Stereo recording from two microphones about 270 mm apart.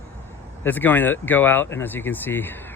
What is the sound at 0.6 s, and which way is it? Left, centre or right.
Speech, centre.